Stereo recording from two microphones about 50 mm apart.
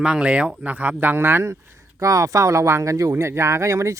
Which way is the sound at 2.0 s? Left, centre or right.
Right.